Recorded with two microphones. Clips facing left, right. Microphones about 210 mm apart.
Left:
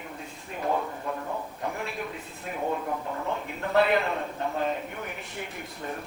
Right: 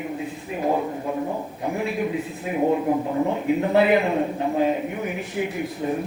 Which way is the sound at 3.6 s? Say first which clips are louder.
Right 4 dB; 5° right (ahead or behind).